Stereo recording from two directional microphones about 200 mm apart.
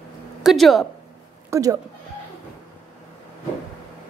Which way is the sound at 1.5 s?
15° right (ahead or behind).